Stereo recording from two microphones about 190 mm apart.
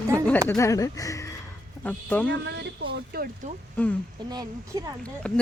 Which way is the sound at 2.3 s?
65° right (ahead or behind).